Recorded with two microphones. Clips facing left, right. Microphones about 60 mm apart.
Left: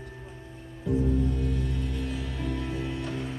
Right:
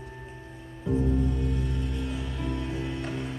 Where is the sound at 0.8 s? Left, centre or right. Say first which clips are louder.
Even; right.